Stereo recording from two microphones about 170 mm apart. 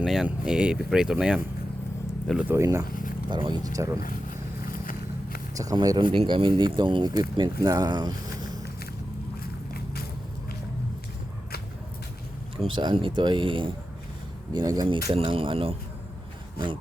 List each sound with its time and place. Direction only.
0.0 s speech: 5° right (ahead or behind)
3.2 s speech: 25° right (ahead or behind)
4.6 s vehicle: 55° left (ahead or behind)
5.5 s speech: 20° right (ahead or behind)
9.4 s a sound: 65° left (ahead or behind)
12.5 s speech: 30° right (ahead or behind)